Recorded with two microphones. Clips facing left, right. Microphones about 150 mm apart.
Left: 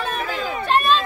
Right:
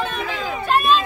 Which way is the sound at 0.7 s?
5° right (ahead or behind).